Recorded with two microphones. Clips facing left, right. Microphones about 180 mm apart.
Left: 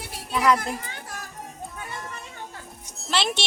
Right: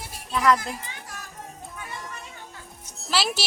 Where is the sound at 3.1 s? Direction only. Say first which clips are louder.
Even; 5° right (ahead or behind).